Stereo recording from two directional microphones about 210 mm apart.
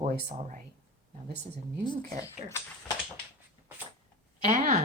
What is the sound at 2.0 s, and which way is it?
Speech, 15° left (ahead or behind).